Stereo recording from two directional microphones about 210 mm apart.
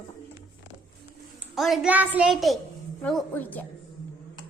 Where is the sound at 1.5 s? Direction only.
Centre (ahead or behind).